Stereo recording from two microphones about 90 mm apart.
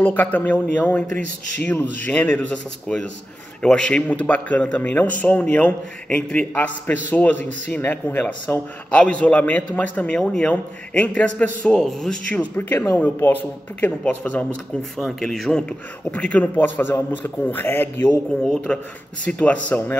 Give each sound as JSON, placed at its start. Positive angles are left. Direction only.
{"t": 0.0, "sound": "a man's voice", "side_deg": 20}
{"t": 12.3, "sound": "a man's voice", "side_deg": 15}
{"t": 15.0, "sound": "a man's voice", "side_deg": 5}
{"t": 16.1, "sound": "a man's voice", "side_deg": 15}
{"t": 18.7, "sound": "a man's voice", "side_deg": 15}